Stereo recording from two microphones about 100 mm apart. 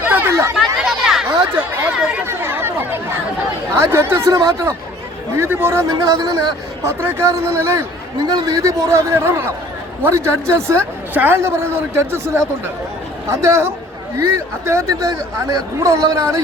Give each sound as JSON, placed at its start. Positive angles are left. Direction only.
{"t": 0.1, "sound": "chatter", "side_deg": -25}
{"t": 0.5, "sound": "chatter", "side_deg": -5}
{"t": 1.8, "sound": "speech", "side_deg": -10}
{"t": 2.2, "sound": "chatter", "side_deg": -20}
{"t": 3.8, "sound": "a man's voice", "side_deg": -25}
{"t": 8.2, "sound": "a man's voice", "side_deg": -45}